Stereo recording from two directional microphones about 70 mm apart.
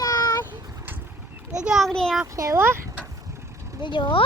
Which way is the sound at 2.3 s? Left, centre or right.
Right.